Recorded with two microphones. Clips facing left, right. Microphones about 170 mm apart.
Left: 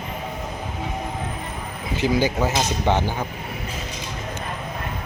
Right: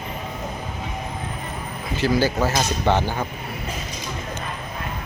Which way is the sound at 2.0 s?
15° left (ahead or behind).